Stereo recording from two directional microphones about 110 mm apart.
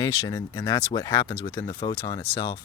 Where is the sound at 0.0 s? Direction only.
30° left (ahead or behind).